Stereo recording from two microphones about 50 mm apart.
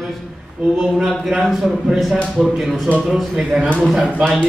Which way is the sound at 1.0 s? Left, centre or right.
Centre.